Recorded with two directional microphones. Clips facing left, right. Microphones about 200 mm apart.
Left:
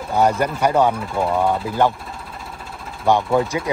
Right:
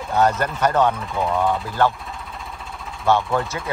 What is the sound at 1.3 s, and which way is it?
Speech, 15° left (ahead or behind).